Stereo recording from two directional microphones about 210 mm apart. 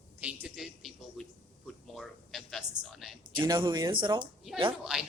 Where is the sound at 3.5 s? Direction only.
20° right (ahead or behind).